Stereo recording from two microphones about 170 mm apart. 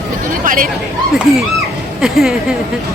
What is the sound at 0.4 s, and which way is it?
Speech, 50° right (ahead or behind).